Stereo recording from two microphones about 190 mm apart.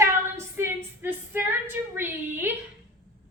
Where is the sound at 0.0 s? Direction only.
15° right (ahead or behind).